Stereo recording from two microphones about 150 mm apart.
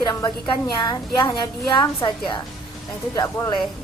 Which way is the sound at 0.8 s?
30° left (ahead or behind).